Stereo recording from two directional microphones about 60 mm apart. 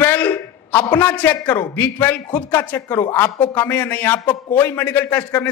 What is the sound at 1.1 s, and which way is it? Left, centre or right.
A man's voice, left.